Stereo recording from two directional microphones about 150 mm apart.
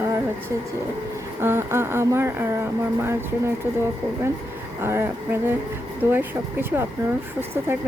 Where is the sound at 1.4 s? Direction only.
15° right (ahead or behind).